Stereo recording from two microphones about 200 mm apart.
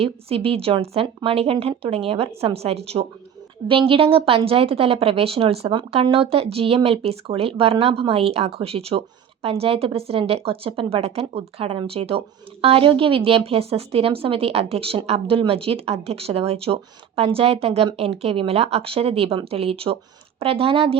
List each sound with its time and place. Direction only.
0.0 s a woman's voice: 30° right (ahead or behind)